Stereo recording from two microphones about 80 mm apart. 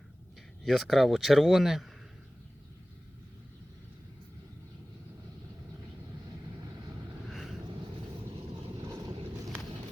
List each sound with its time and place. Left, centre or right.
0.6 s speech: centre
6.2 s vehicle: right
7.3 s vehicle: centre